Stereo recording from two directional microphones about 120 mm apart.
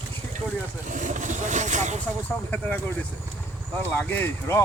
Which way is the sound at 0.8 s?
90° right.